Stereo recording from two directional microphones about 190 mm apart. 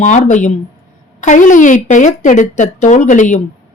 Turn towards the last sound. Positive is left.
turn(degrees=40)  # may be behind; listen again after turning